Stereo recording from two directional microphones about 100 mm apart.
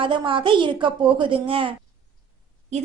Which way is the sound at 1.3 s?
65° right (ahead or behind).